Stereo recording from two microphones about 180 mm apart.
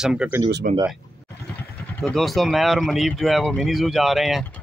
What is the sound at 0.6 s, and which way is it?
Speech, 50° right (ahead or behind).